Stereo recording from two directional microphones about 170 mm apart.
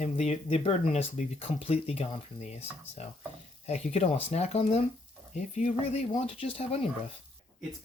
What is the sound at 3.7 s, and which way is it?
Speech, 35° left (ahead or behind).